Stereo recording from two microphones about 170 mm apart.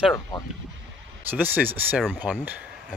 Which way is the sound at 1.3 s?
10° right (ahead or behind).